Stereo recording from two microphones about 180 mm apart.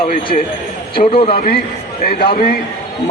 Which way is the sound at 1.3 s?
55° left (ahead or behind).